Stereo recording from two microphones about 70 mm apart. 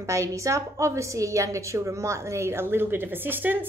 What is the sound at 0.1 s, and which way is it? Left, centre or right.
A woman's voice, right.